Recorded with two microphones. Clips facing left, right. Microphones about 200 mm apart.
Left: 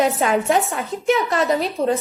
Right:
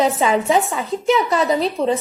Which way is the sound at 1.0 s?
Centre (ahead or behind).